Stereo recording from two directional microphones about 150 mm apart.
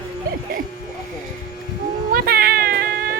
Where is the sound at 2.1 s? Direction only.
85° right.